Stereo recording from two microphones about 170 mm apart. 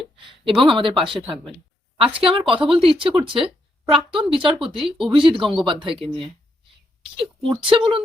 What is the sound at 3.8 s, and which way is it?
Speech, 30° right (ahead or behind).